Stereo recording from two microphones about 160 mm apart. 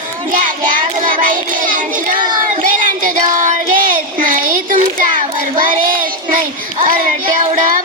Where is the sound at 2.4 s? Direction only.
60° right (ahead or behind).